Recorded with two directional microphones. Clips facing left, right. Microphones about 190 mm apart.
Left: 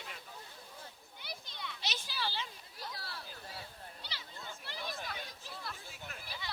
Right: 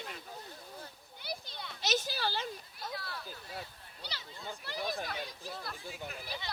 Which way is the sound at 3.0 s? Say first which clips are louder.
Right 3 dB; 35° left (ahead or behind).